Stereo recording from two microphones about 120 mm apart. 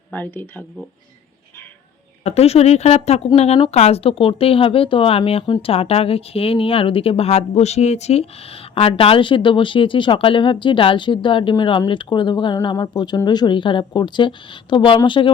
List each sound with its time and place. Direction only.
0.1 s speech: 15° left (ahead or behind)
2.2 s speech: 60° left (ahead or behind)
8.7 s a woman's voice: 50° left (ahead or behind)